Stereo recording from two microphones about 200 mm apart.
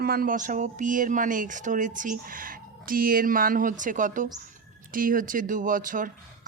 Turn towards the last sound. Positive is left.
turn(degrees=-40)  # may be behind; listen again after turning